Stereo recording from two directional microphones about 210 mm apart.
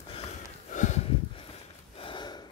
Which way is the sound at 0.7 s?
35° left (ahead or behind).